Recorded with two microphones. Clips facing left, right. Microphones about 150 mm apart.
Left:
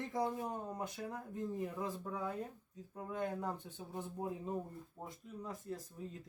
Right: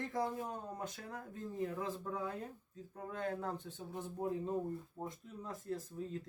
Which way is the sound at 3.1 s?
15° left (ahead or behind).